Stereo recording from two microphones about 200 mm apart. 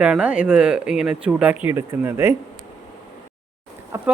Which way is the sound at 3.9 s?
10° right (ahead or behind).